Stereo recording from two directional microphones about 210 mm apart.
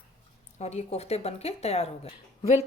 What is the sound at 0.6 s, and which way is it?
A woman's voice, 30° left (ahead or behind).